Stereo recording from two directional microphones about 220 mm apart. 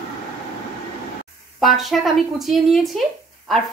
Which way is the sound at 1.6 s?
Centre (ahead or behind).